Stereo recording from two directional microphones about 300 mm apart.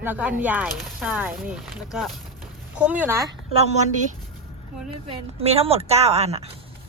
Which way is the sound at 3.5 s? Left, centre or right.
Right.